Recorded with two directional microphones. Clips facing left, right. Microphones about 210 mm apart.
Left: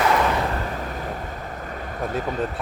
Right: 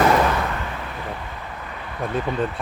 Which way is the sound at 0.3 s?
35° left (ahead or behind).